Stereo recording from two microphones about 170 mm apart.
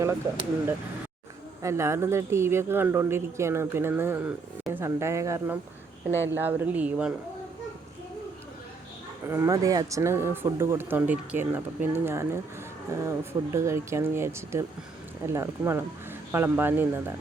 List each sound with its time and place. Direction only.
1.6 s speech: 15° right (ahead or behind)
9.2 s speech: 15° right (ahead or behind)